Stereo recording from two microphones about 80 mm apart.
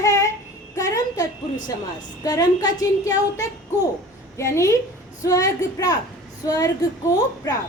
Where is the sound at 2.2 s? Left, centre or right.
Left.